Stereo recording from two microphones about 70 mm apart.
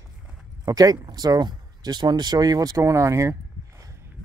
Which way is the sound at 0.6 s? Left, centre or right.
Right.